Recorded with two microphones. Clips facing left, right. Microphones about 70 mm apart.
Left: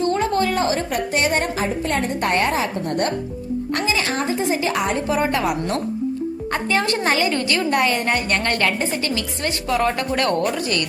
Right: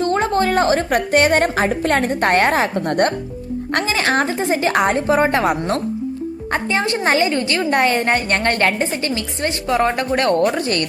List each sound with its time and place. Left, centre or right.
0.0 s a woman's voice: right
6.5 s a woman's voice: right
10.6 s speech: right